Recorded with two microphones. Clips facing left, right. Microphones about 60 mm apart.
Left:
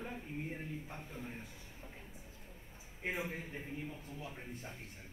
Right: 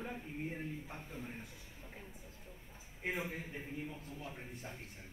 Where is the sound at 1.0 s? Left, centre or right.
Left.